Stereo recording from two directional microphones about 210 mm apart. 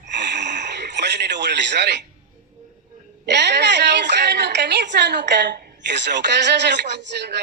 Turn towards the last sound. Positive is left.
turn(degrees=-55)  # may be behind; listen again after turning